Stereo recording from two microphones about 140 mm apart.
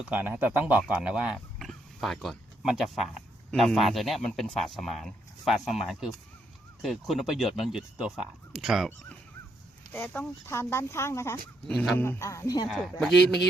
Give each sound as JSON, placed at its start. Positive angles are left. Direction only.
{"t": 0.0, "sound": "speech", "side_deg": -10}
{"t": 9.9, "sound": "speech", "side_deg": 10}
{"t": 12.7, "sound": "speech", "side_deg": 0}